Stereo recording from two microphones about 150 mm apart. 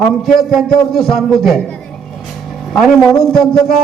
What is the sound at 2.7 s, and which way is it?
Speech, centre (ahead or behind).